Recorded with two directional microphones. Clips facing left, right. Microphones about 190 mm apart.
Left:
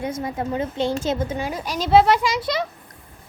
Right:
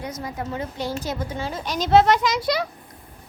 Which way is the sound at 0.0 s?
25° left (ahead or behind).